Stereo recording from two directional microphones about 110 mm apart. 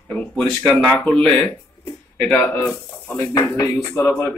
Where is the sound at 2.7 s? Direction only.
30° left (ahead or behind).